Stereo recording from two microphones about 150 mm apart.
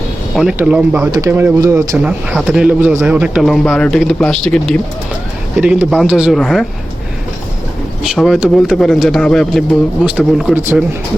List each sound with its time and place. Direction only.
0.3 s speech: 5° right (ahead or behind)
1.1 s speech: 20° right (ahead or behind)
2.0 s a man's voice: 5° right (ahead or behind)
5.5 s a man's voice: 10° right (ahead or behind)
8.0 s a man's voice: centre (ahead or behind)
10.2 s a man's voice: 5° right (ahead or behind)